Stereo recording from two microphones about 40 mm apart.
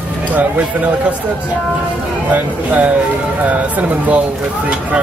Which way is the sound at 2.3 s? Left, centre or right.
Right.